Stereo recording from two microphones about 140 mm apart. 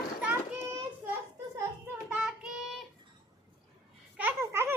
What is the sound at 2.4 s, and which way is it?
Child singing, 5° right (ahead or behind).